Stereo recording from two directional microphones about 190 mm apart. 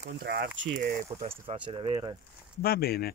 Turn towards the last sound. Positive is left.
turn(degrees=55)  # may be behind; listen again after turning